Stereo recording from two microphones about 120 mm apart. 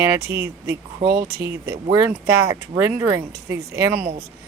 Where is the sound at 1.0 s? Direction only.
35° right (ahead or behind).